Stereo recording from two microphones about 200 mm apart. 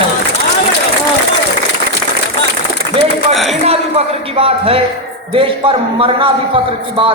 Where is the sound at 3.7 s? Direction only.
30° right (ahead or behind).